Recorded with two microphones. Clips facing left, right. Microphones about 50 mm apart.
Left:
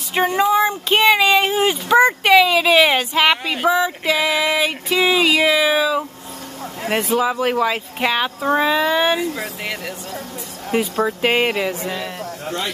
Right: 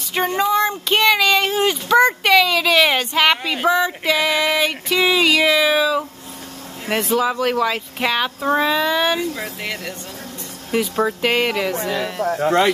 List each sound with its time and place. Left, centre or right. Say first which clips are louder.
0.1 s speech: left 2 dB; centre
11.7 s speech: right 3 dB; right